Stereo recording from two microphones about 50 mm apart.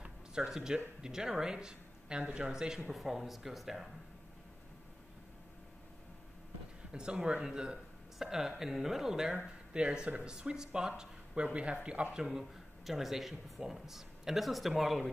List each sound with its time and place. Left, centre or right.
0.0 s a sound: centre
1.0 s speech: centre
2.9 s speech: centre
6.9 s a man's voice: centre
12.2 s speech: centre